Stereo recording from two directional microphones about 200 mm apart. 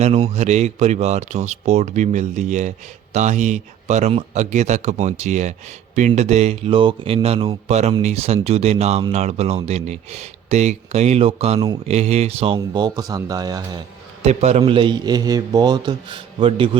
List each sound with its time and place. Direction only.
0.0 s a man's voice: 30° right (ahead or behind)
14.3 s a man's voice: 30° right (ahead or behind)